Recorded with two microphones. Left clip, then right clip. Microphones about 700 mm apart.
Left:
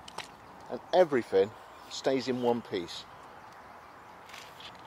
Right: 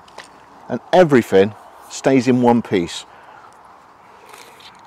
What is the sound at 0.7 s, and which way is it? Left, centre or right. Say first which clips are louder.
Speech: right 13 dB; right.